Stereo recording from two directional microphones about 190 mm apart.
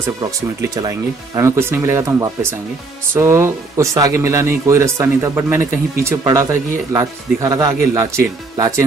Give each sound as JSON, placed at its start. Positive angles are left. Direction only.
{"t": 0.6, "sound": "speech", "side_deg": -15}